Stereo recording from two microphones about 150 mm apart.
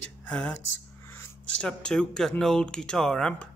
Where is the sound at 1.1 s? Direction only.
15° left (ahead or behind).